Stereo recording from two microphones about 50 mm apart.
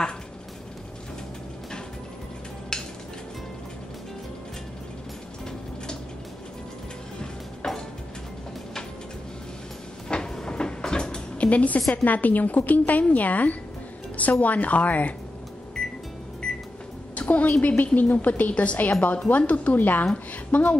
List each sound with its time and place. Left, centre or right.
2.7 s cutlery: centre
7.2 s music: centre
10.0 s a sound: centre
11.9 s a woman's voice: left
15.8 s music: centre
16.4 s microwave oven: centre
17.1 s a woman's voice: left